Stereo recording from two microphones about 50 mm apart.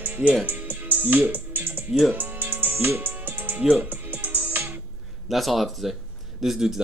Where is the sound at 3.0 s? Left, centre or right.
Right.